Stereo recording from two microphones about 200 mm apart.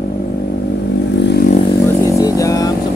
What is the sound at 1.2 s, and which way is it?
Vehicle, 55° left (ahead or behind).